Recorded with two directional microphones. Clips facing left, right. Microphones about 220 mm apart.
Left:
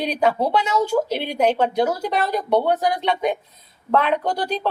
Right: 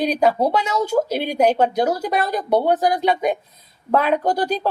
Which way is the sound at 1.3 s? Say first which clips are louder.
Right 2 dB; 40° right (ahead or behind).